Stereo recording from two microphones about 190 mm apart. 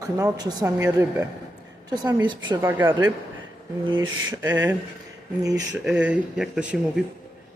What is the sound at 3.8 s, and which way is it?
Speech, 25° right (ahead or behind).